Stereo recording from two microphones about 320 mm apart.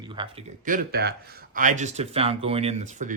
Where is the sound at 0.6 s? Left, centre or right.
Right.